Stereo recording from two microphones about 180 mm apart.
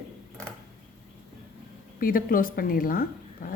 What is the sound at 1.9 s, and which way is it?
A woman's voice, 50° left (ahead or behind).